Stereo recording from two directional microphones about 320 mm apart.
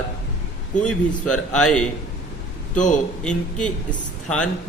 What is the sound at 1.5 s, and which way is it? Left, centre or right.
Speech, centre.